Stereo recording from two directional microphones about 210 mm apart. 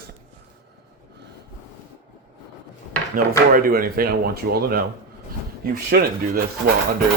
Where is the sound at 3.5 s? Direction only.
45° right (ahead or behind).